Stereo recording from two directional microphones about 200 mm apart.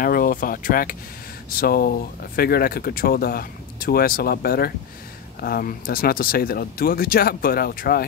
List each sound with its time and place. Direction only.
0.0 s speech: 45° left (ahead or behind)